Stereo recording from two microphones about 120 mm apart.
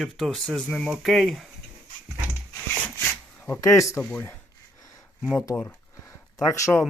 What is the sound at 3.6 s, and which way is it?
Speech, 25° left (ahead or behind).